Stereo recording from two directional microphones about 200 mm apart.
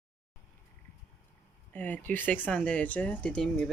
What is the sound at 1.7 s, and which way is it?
Speech, 10° left (ahead or behind).